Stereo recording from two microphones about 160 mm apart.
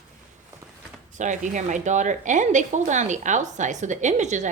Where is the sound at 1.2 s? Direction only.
50° right (ahead or behind).